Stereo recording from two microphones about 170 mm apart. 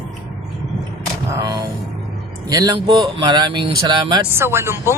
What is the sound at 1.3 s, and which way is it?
Music, 20° right (ahead or behind).